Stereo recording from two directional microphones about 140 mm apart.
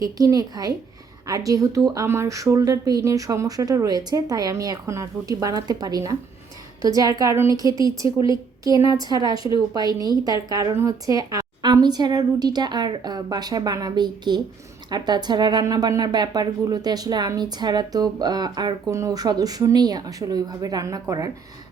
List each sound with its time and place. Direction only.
0.0 s speech: 25° right (ahead or behind)